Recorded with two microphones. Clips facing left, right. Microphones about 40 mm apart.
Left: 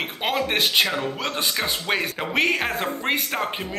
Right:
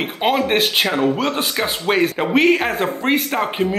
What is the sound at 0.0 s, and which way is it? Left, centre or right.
Speech, centre.